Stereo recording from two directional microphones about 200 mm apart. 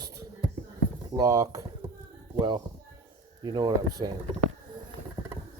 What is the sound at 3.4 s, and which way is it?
Speech, 20° right (ahead or behind).